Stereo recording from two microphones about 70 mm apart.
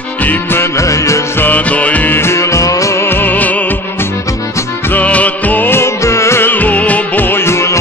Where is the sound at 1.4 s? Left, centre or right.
Left.